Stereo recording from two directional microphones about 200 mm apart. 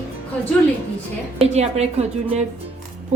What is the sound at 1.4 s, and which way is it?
Speech, 35° right (ahead or behind).